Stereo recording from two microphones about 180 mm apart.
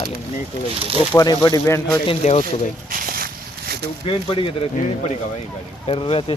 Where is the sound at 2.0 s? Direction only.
35° left (ahead or behind).